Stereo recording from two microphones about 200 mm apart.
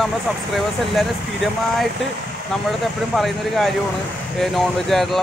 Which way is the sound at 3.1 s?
Centre (ahead or behind).